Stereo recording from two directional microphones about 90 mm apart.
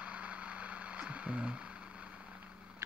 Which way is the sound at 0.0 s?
15° right (ahead or behind).